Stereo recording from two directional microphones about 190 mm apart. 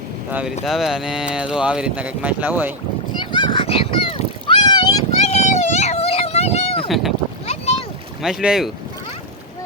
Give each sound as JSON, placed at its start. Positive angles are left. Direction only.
{"t": 0.3, "sound": "speech", "side_deg": -10}
{"t": 3.3, "sound": "a sound", "side_deg": 25}
{"t": 5.3, "sound": "a sound", "side_deg": 35}
{"t": 6.8, "sound": "boat", "side_deg": 0}
{"t": 7.4, "sound": "boat", "side_deg": 35}
{"t": 8.2, "sound": "speech", "side_deg": -5}